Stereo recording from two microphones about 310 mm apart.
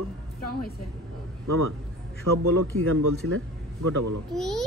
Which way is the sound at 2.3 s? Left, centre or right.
Right.